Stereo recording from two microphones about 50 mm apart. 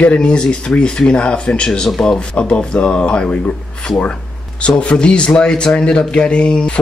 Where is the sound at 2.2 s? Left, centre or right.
Left.